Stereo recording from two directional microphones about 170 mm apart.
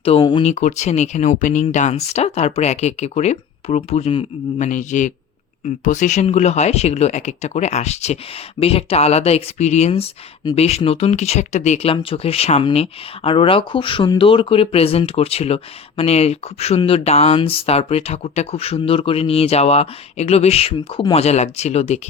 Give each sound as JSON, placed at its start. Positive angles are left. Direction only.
{"t": 0.0, "sound": "speech", "side_deg": 30}
{"t": 0.4, "sound": "speech", "side_deg": 40}